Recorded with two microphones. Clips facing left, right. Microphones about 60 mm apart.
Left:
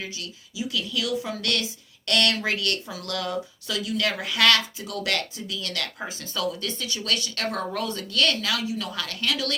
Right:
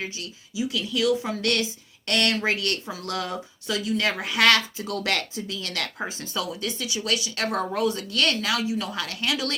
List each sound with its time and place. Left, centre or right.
0.0 s speech: right